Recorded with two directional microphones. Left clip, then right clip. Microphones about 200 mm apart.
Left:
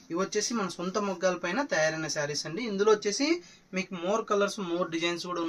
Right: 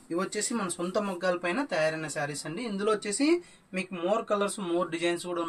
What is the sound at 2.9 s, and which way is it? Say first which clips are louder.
Speech: even; 10° left (ahead or behind).